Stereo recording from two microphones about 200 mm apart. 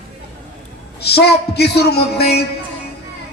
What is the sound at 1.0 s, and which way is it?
A man's voice, 55° left (ahead or behind).